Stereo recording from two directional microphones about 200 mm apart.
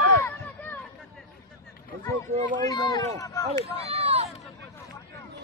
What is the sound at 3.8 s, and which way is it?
Run, 30° right (ahead or behind).